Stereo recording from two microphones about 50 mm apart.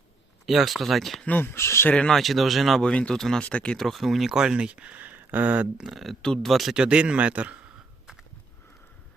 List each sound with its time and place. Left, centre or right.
0.4 s speech: centre
1.4 s speech: left
2.0 s speech: centre
2.8 s speech: centre
3.2 s speech: centre
3.4 s speech: left
3.8 s speech: centre
4.3 s speech: centre; by 5.6 s right
5.7 s speech: centre
6.2 s speech: centre
6.5 s speech: centre
6.7 s a man's voice: right